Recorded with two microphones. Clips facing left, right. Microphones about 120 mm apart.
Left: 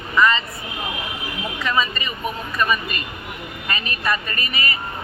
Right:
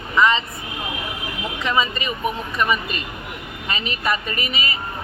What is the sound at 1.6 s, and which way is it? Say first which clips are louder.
Speech: right 1 dB; 20° right (ahead or behind).